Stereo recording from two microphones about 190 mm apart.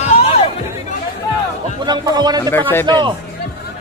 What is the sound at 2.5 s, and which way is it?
Speech, 10° left (ahead or behind).